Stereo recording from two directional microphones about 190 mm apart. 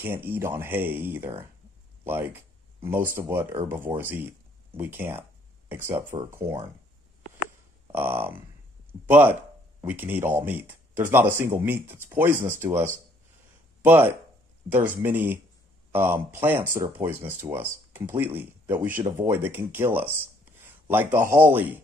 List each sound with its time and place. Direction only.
0.0 s speech: 10° right (ahead or behind)
2.0 s a sound: 10° right (ahead or behind)
3.2 s speech: 10° right (ahead or behind)
7.9 s speech: 10° right (ahead or behind)